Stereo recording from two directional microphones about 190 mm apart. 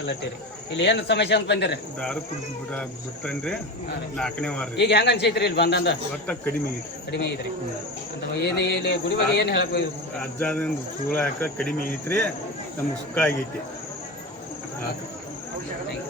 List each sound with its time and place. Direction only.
0.7 s a man's voice: 70° left (ahead or behind)
3.2 s speech: 5° left (ahead or behind)
4.8 s a man's voice: 65° left (ahead or behind)
8.4 s a man's voice: 60° left (ahead or behind)
10.2 s speech: 5° left (ahead or behind)